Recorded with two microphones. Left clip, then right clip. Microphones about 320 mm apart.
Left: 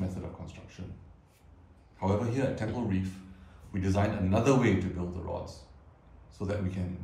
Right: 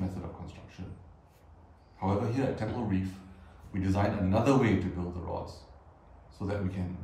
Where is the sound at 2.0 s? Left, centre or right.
Centre.